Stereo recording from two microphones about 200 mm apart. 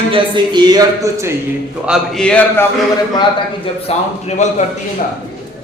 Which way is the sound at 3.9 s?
30° left (ahead or behind).